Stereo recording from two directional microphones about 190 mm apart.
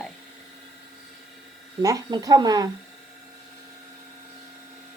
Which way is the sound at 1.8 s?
20° right (ahead or behind).